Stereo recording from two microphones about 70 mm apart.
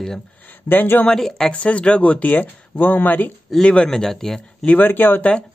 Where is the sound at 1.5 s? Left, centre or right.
Centre.